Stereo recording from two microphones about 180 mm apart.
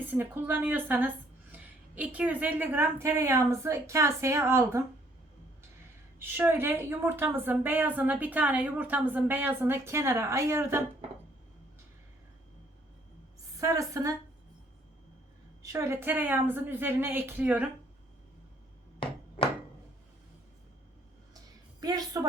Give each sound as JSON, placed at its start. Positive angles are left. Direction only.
{"t": 0.0, "sound": "a woman's voice", "side_deg": -10}
{"t": 6.1, "sound": "a woman's voice", "side_deg": -10}
{"t": 13.6, "sound": "a woman's voice", "side_deg": -20}
{"t": 15.6, "sound": "a woman's voice", "side_deg": -15}
{"t": 21.8, "sound": "music", "side_deg": -20}